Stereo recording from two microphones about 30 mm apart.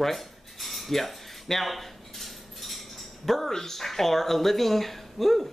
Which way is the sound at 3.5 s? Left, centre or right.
Centre.